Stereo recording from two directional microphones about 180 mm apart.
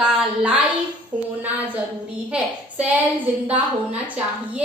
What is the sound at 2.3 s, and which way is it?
Speech, 10° right (ahead or behind).